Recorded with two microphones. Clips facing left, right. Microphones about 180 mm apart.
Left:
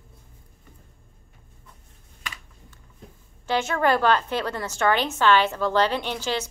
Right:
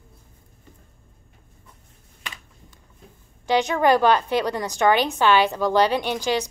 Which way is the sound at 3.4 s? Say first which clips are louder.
Right 4 dB; 15° right (ahead or behind).